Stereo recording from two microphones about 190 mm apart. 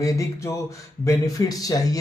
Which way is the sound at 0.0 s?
15° left (ahead or behind).